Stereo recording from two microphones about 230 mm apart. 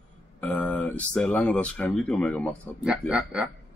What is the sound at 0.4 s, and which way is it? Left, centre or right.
Speech, centre.